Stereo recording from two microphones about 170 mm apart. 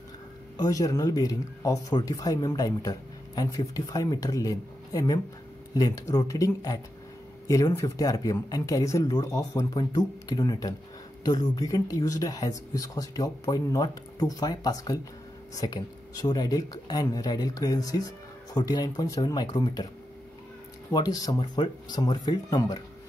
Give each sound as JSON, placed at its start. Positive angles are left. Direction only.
{"t": 0.6, "sound": "speech", "side_deg": 20}
{"t": 20.9, "sound": "speech", "side_deg": 20}